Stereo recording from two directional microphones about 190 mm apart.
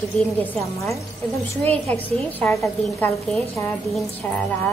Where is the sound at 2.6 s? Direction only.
5° left (ahead or behind).